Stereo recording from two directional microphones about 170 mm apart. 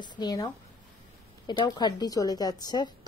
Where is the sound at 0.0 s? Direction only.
25° left (ahead or behind).